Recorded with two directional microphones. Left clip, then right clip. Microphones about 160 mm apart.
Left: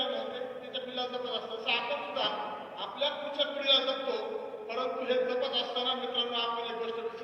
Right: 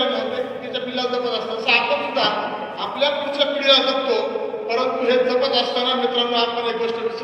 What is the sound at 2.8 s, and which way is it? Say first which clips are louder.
A man's voice: right 12 dB; 45° right (ahead or behind).